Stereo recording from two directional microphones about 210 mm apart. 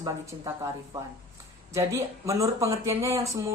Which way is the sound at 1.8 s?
15° right (ahead or behind).